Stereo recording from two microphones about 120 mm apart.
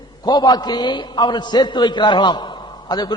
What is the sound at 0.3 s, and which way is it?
A man's voice, 35° left (ahead or behind).